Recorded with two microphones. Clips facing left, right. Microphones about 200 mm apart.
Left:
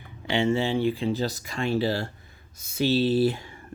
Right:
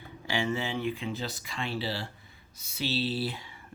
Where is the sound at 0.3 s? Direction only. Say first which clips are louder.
Left 7 dB; 25° left (ahead or behind).